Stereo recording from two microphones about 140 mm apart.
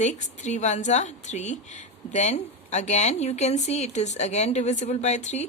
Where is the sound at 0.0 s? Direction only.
55° left (ahead or behind).